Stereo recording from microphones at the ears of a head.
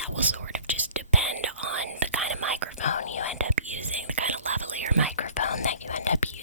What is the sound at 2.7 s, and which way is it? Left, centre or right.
Whispering, left.